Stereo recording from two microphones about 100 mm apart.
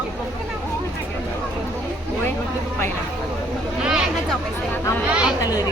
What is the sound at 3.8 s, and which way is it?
Speech, 5° right (ahead or behind).